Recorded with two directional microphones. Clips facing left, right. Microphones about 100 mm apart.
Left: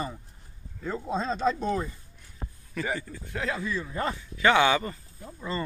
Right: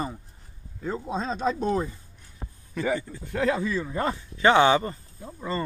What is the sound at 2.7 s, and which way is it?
Speech, 20° right (ahead or behind).